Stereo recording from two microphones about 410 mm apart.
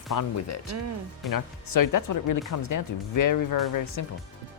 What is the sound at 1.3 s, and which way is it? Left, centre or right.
Speech, left.